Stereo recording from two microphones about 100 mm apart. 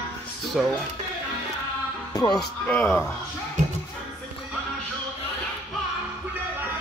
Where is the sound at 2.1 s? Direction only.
40° left (ahead or behind).